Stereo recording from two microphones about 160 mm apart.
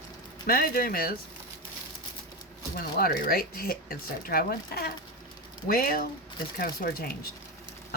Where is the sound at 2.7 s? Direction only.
70° left (ahead or behind).